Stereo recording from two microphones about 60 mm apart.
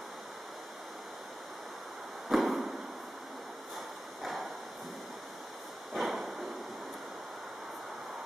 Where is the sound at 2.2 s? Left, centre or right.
Centre.